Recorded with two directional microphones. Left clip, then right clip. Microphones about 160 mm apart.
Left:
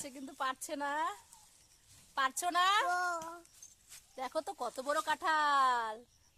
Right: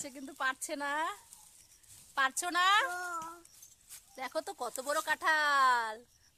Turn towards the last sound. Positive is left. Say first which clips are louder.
# right 2 dB
turn(degrees=5)  # may be behind; listen again after turning